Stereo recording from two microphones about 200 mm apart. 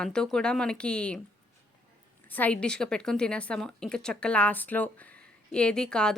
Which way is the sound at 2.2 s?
10° left (ahead or behind).